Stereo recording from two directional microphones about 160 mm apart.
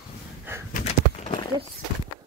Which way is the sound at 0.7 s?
45° left (ahead or behind).